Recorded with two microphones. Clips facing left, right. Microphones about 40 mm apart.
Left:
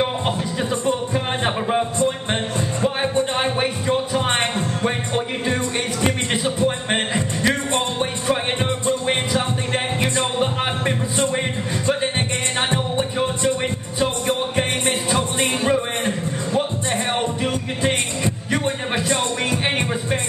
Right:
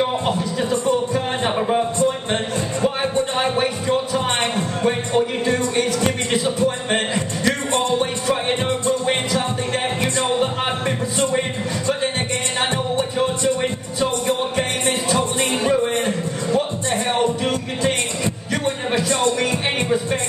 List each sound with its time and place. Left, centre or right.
0.8 s music: centre
10.1 s music: centre
12.7 s music: left
17.4 s music: centre